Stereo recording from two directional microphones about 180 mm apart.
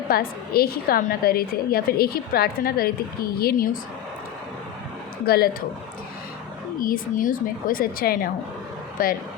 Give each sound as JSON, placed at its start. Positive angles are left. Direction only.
{"t": 0.1, "sound": "a woman's voice", "side_deg": 55}
{"t": 5.2, "sound": "a woman's voice", "side_deg": 60}
{"t": 6.7, "sound": "a woman's voice", "side_deg": 50}